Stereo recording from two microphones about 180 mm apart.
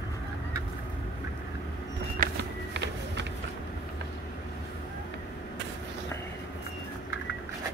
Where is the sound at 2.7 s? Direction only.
80° right.